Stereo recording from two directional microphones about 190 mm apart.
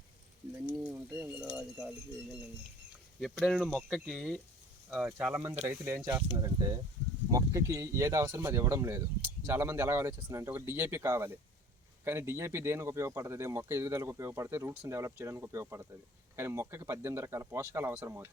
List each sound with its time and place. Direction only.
0.8 s speech: 5° right (ahead or behind)
3.2 s speech: centre (ahead or behind)